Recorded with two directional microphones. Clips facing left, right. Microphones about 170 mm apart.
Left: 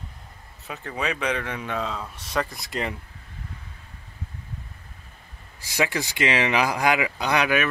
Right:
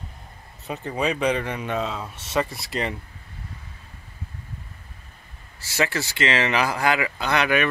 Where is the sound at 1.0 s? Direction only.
10° right (ahead or behind).